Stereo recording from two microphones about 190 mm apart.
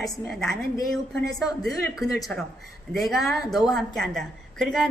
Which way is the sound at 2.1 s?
Centre (ahead or behind).